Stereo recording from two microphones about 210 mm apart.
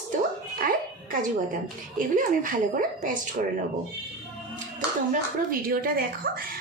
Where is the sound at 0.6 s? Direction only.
40° right (ahead or behind).